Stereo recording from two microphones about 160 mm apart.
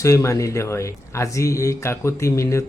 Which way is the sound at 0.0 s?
20° left (ahead or behind).